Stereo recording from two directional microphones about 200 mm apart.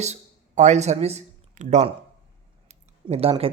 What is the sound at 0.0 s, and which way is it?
Speech, 35° right (ahead or behind).